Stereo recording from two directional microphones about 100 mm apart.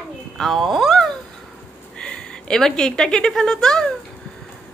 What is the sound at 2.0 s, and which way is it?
A woman's voice, 10° left (ahead or behind).